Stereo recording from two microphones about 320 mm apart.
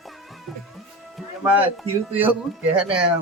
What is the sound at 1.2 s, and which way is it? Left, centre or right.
Music, centre.